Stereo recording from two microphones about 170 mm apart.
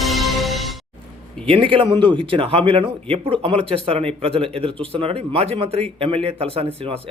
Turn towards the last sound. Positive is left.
turn(degrees=-35)  # may be behind; listen again after turning